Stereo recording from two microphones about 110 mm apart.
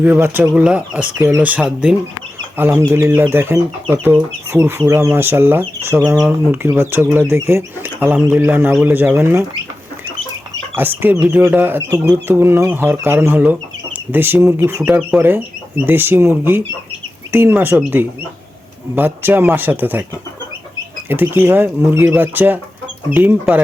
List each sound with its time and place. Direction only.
0.0 s speech: 15° right (ahead or behind)
2.6 s speech: 20° right (ahead or behind)
10.8 s speech: 15° right (ahead or behind)
21.1 s speech: 20° right (ahead or behind)